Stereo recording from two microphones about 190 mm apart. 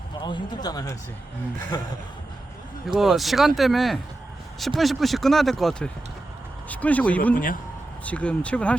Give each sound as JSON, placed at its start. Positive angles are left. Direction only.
{"t": 0.2, "sound": "speech", "side_deg": 20}
{"t": 2.8, "sound": "speech", "side_deg": 0}
{"t": 7.3, "sound": "a man's voice", "side_deg": 45}
{"t": 8.0, "sound": "speech", "side_deg": 5}